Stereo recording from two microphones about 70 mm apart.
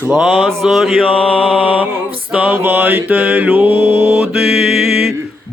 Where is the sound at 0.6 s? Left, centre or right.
Centre.